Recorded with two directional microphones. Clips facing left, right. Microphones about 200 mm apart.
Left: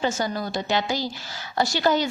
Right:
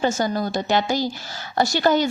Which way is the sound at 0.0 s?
45° right (ahead or behind).